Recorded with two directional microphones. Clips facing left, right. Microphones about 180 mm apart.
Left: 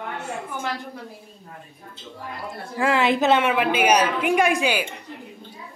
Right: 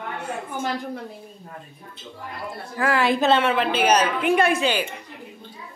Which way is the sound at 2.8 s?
20° left (ahead or behind).